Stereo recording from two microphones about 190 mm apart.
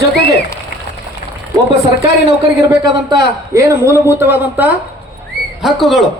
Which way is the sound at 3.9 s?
15° right (ahead or behind).